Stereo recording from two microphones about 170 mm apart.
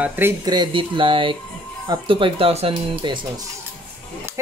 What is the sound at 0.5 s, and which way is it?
Speech, 25° right (ahead or behind).